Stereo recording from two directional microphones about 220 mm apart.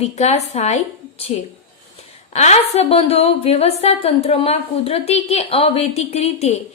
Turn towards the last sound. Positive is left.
turn(degrees=30)  # may be behind; listen again after turning